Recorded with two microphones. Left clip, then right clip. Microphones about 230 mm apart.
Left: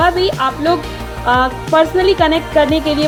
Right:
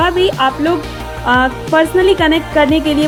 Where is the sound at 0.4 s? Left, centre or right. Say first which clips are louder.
Right 1 dB; right.